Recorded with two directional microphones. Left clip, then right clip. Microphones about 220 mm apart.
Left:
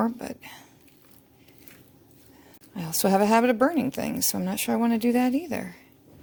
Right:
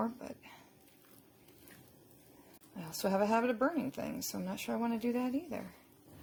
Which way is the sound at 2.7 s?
35° left (ahead or behind).